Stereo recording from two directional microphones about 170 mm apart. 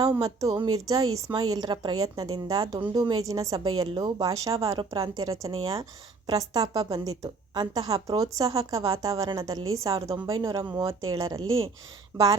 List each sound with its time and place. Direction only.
0.0 s a woman's voice: 20° right (ahead or behind)